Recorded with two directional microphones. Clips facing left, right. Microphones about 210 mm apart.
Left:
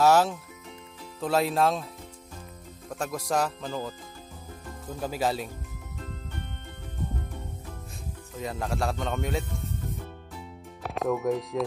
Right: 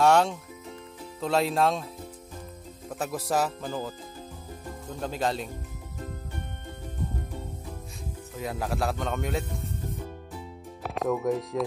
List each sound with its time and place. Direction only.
0.0 s speech: 5° left (ahead or behind)
2.9 s speech: 5° right (ahead or behind)
8.4 s speech: centre (ahead or behind)
10.8 s speech: centre (ahead or behind)